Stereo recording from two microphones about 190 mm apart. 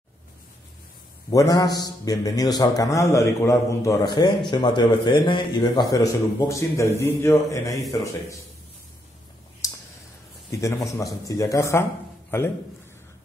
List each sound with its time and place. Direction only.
1.3 s a man's voice: 15° left (ahead or behind)
9.6 s a sound: 20° left (ahead or behind)
10.5 s a man's voice: 15° left (ahead or behind)